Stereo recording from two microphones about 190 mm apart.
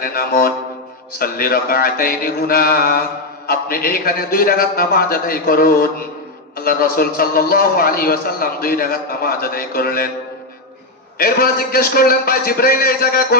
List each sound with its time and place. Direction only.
0.0 s a man's voice: 50° left (ahead or behind)
11.2 s a man's voice: 50° left (ahead or behind)